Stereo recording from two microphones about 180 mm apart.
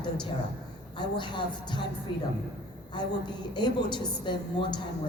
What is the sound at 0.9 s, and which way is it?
Speech, 25° left (ahead or behind).